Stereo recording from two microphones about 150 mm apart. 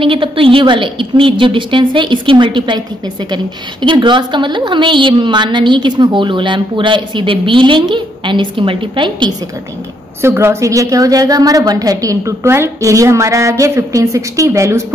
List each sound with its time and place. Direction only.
0.0 s a woman's voice: 35° right (ahead or behind)
3.8 s a woman's voice: 30° right (ahead or behind)
10.2 s a woman's voice: 15° right (ahead or behind)